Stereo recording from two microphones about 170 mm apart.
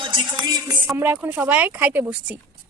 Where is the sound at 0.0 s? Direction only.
25° right (ahead or behind).